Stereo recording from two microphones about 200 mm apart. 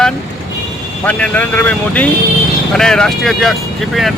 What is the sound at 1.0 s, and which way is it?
Speech, 5° left (ahead or behind).